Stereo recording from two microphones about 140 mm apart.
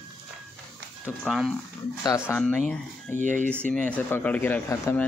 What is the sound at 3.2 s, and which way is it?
Speech, 60° right (ahead or behind).